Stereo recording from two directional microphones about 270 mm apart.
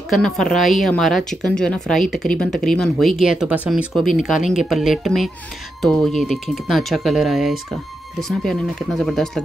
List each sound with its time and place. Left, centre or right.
0.1 s speech: centre